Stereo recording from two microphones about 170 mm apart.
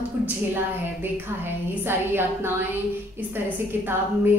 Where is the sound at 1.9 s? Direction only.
15° right (ahead or behind).